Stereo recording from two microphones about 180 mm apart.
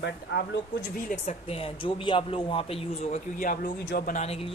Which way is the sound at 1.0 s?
40° left (ahead or behind).